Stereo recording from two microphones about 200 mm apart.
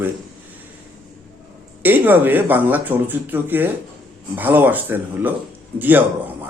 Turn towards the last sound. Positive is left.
turn(degrees=-10)  # may be behind; listen again after turning